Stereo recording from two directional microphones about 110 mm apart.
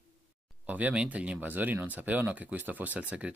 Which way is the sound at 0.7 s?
15° right (ahead or behind).